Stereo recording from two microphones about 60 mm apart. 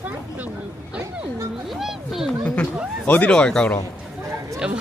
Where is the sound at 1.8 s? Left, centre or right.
Centre.